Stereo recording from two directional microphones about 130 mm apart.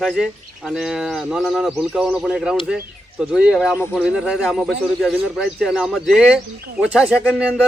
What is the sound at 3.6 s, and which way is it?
Speech, 20° left (ahead or behind).